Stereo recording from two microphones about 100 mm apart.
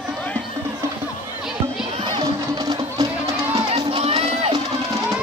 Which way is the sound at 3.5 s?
80° right.